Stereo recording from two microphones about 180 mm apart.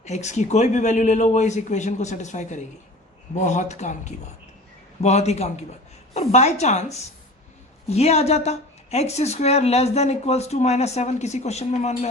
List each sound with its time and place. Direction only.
0.0 s speech: 40° left (ahead or behind)